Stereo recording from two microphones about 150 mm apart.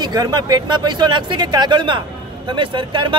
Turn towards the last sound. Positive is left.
turn(degrees=-30)  # may be behind; listen again after turning